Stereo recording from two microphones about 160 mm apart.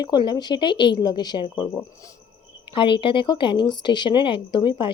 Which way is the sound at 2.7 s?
30° left (ahead or behind).